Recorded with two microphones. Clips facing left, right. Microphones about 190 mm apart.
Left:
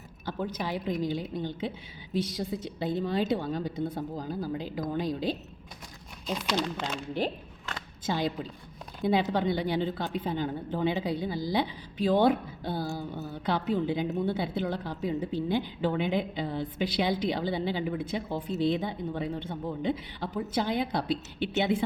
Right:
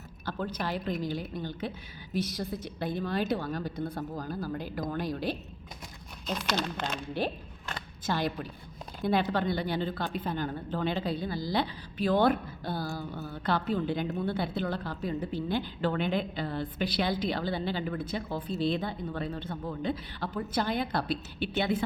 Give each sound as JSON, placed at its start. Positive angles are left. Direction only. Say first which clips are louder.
{"t": 0.3, "sound": "a woman's voice", "louder": "left 1 dB", "side_deg": 15}
{"t": 6.2, "sound": "a woman's voice", "louder": "left 2 dB", "side_deg": 0}
{"t": 9.0, "sound": "a woman's voice", "louder": "left 2 dB", "side_deg": 20}